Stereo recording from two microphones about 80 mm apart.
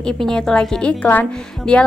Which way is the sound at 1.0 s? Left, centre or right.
Centre.